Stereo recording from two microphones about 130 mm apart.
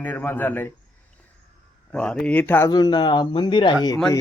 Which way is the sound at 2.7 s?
30° left (ahead or behind).